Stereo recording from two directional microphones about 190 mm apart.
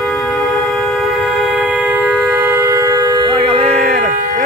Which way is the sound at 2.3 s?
15° right (ahead or behind).